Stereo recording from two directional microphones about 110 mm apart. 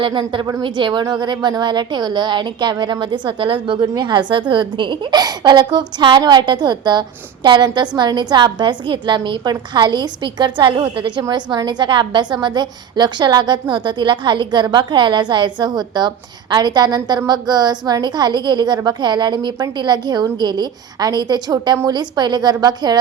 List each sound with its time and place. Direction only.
0.0 s a woman's voice: 50° right (ahead or behind)